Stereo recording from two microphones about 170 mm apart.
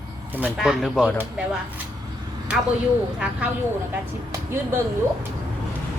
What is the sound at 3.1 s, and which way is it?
Speech, 5° right (ahead or behind).